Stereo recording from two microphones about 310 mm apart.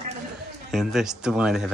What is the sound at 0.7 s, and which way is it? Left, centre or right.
Speech, centre.